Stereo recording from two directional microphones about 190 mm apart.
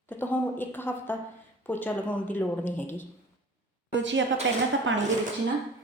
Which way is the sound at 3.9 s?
75° right (ahead or behind).